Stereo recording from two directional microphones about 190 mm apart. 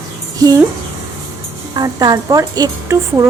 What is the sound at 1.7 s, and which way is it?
Speech, 20° right (ahead or behind).